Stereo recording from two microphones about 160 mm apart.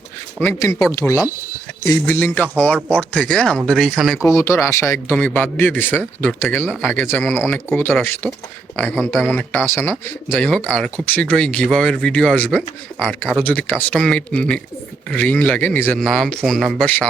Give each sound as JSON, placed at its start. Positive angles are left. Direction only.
{"t": 0.3, "sound": "speech", "side_deg": 10}
{"t": 4.2, "sound": "speech", "side_deg": 15}